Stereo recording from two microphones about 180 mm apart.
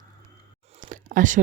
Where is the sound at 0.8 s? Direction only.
45° right (ahead or behind).